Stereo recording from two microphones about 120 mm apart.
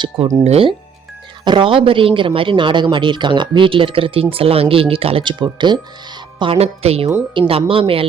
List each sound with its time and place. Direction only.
0.4 s speech: 60° right (ahead or behind)
1.5 s speech: 45° right (ahead or behind)